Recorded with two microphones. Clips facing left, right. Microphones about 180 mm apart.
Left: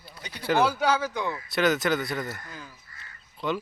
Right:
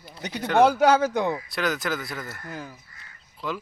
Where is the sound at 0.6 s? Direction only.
50° right (ahead or behind).